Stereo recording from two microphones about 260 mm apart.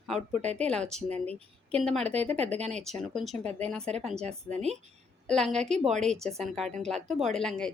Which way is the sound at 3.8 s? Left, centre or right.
Right.